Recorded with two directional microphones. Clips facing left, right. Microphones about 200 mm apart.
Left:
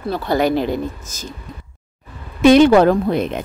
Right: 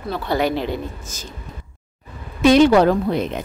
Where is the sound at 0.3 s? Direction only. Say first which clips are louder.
Left 3 dB; 45° left (ahead or behind).